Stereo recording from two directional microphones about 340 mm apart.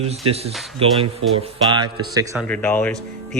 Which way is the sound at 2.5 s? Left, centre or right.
Centre.